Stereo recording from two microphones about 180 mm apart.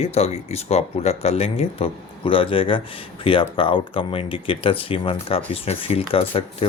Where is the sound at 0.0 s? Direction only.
35° left (ahead or behind).